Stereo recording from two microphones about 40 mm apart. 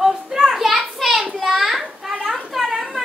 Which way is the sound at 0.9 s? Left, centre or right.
Centre.